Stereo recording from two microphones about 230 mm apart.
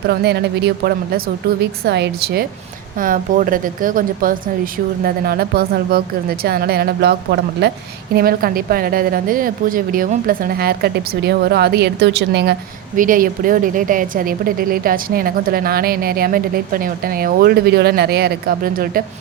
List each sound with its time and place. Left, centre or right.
0.1 s a woman's voice: right
13.0 s a woman's voice: right